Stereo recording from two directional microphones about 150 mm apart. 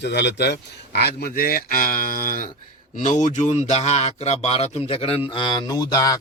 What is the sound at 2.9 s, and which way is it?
A man's voice, 55° left (ahead or behind).